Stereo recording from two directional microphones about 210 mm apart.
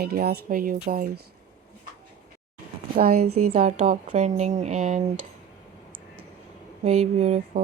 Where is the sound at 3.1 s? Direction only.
90° right.